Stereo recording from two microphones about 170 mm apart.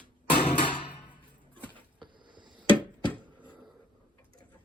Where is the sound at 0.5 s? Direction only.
30° left (ahead or behind).